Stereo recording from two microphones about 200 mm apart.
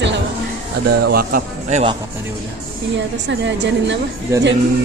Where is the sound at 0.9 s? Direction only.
50° right (ahead or behind).